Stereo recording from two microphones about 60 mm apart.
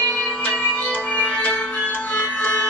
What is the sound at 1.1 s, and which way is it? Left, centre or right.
Music, left.